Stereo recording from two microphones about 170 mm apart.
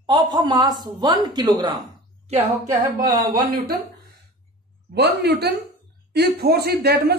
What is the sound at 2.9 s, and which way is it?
Speech, 55° right (ahead or behind).